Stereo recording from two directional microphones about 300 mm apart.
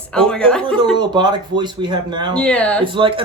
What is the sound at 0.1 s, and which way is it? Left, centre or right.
Speech, centre.